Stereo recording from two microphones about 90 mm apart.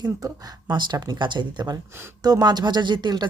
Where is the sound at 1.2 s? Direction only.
60° right (ahead or behind).